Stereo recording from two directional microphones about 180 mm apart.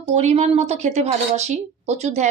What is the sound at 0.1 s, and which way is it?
A woman's voice, 40° right (ahead or behind).